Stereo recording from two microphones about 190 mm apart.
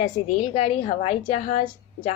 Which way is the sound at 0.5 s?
35° left (ahead or behind).